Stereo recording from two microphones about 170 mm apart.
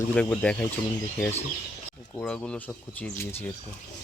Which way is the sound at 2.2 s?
5° left (ahead or behind).